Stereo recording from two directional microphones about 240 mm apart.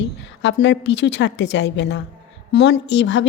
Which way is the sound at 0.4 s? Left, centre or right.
Left.